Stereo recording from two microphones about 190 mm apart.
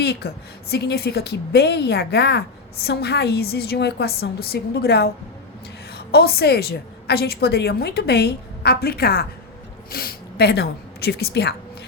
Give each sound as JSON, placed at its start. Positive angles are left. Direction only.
{"t": 0.0, "sound": "a woman's voice", "side_deg": 60}